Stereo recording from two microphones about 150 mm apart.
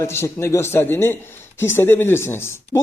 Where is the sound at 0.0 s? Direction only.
15° left (ahead or behind).